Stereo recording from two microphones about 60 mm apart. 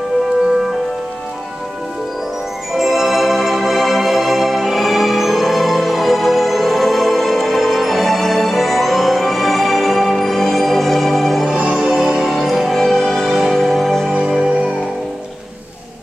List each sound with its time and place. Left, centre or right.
2.7 s music: centre
11.4 s music: centre
11.9 s music: centre